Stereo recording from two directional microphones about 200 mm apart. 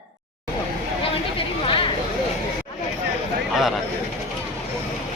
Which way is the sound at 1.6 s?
25° left (ahead or behind).